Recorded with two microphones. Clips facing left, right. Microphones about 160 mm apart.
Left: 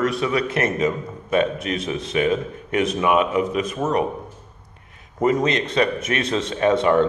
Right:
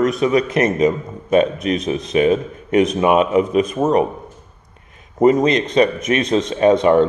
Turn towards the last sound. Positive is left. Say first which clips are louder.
# right 5 dB
turn(degrees=-20)  # may be behind; listen again after turning